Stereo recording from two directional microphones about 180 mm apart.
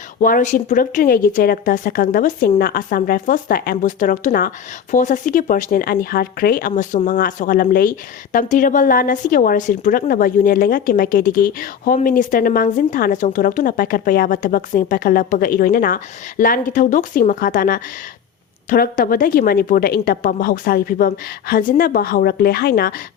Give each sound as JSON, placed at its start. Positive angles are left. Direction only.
{"t": 0.2, "sound": "a woman's voice", "side_deg": 45}